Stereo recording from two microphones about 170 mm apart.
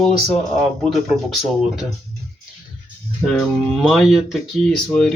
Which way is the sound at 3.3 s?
Centre (ahead or behind).